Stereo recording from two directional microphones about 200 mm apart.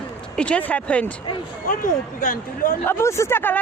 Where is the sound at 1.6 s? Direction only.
45° left (ahead or behind).